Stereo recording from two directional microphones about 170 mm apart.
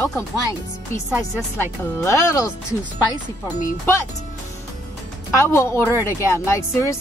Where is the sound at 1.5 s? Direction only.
15° left (ahead or behind).